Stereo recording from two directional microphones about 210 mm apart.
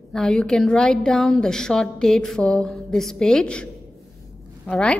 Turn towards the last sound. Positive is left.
turn(degrees=5)  # may be behind; listen again after turning